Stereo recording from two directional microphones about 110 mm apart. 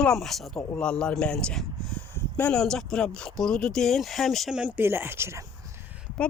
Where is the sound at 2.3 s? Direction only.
15° left (ahead or behind).